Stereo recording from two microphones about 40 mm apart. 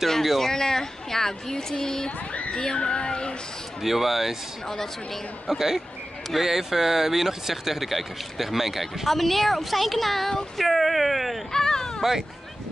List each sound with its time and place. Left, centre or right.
0.2 s speech: centre
0.5 s speech: centre
3.8 s speech: centre
5.5 s speech: centre
11.5 s a sound: centre
12.0 s speech: centre